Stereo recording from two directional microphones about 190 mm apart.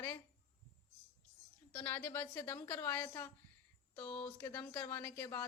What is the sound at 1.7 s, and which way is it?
Speech, 10° left (ahead or behind).